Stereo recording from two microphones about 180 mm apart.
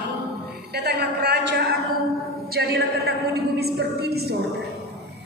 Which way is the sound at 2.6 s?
70° right (ahead or behind).